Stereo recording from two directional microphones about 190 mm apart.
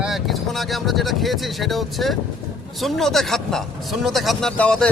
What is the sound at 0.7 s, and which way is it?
Speech, centre (ahead or behind).